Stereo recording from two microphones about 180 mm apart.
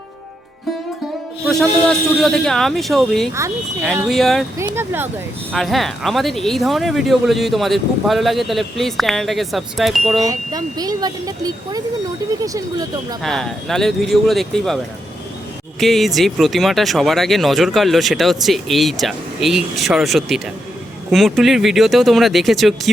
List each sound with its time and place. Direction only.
1.5 s speech: centre (ahead or behind)
4.5 s speech: 15° right (ahead or behind)
5.5 s speech: centre (ahead or behind)
10.2 s speech: 20° right (ahead or behind)
13.2 s speech: centre (ahead or behind)
15.8 s speech: centre (ahead or behind)